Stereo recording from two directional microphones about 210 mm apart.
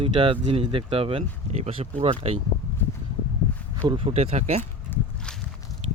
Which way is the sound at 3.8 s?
25° right (ahead or behind).